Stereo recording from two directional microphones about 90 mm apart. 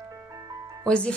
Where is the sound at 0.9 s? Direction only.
10° left (ahead or behind).